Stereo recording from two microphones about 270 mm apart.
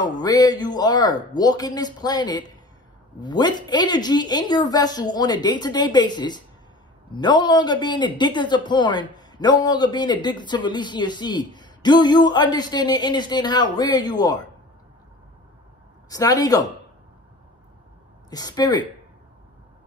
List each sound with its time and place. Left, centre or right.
0.0 s speech: centre
16.1 s speech: centre
18.3 s speech: centre